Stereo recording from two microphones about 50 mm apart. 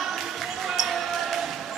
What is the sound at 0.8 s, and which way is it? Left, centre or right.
Basketball bounce, centre.